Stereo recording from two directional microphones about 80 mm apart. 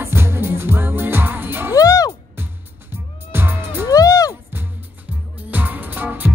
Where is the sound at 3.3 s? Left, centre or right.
Right.